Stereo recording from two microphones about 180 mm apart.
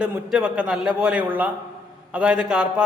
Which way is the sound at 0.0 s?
5° right (ahead or behind).